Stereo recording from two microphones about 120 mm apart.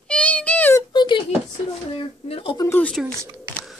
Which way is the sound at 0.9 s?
40° left (ahead or behind).